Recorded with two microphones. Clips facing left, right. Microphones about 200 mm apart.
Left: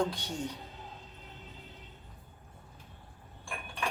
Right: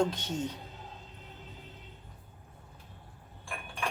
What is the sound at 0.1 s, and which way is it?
Speech, 20° right (ahead or behind).